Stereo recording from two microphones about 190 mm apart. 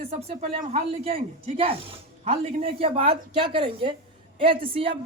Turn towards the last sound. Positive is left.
turn(degrees=-30)  # may be behind; listen again after turning